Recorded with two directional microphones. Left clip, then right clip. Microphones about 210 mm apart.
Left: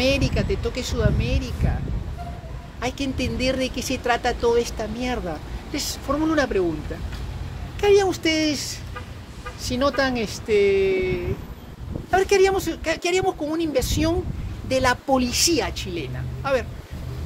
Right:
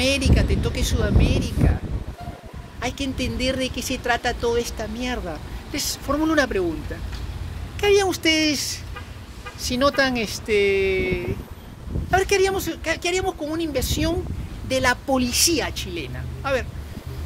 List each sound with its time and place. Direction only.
0.0 s speech: 10° right (ahead or behind)
2.8 s speech: 10° right (ahead or behind)
7.8 s speech: 20° right (ahead or behind)